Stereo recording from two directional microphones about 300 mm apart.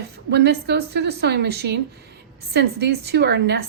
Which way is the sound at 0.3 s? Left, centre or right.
Right.